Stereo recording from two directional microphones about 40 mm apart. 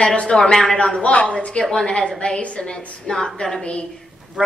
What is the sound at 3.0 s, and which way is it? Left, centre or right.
Speech, centre.